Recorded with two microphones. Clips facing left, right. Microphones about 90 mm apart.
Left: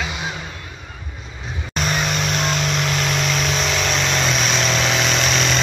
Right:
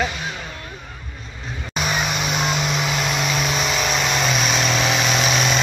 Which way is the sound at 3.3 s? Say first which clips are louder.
Even; 5° right (ahead or behind).